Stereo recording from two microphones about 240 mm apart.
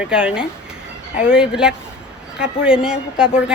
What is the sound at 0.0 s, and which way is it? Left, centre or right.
A woman's voice, centre.